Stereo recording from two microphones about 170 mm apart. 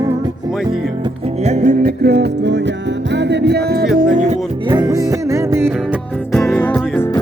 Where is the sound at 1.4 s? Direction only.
45° right (ahead or behind).